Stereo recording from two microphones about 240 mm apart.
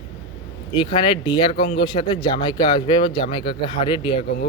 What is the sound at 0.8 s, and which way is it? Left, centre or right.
Speech, centre.